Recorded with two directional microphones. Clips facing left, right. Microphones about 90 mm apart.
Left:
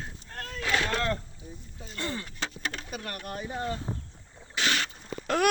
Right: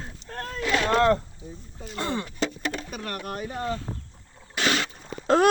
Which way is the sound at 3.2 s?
90° right.